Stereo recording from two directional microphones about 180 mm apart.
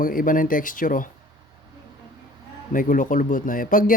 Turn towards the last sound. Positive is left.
turn(degrees=50)  # may be behind; listen again after turning